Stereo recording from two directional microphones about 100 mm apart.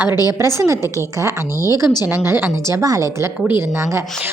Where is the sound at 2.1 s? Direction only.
25° right (ahead or behind).